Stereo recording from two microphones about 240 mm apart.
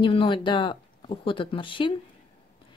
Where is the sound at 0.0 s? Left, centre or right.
Left.